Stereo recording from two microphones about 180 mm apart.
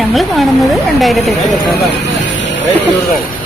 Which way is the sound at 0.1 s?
Centre (ahead or behind).